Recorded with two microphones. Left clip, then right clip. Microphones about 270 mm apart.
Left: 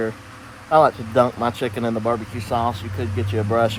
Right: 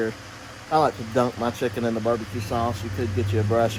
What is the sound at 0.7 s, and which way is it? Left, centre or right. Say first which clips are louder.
Speech: left 6 dB; left.